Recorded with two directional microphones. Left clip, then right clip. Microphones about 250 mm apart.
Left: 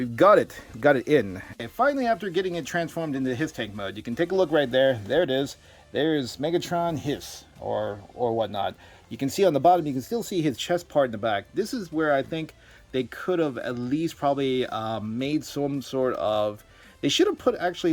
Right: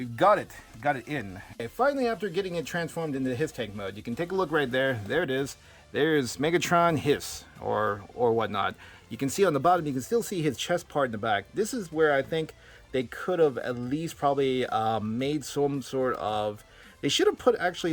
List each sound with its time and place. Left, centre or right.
0.0 s speech: centre
1.5 s speech: centre